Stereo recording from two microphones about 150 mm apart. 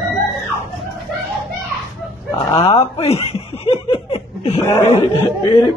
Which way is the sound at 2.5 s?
45° left (ahead or behind).